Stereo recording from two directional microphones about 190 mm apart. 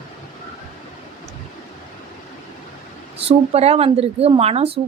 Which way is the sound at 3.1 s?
30° right (ahead or behind).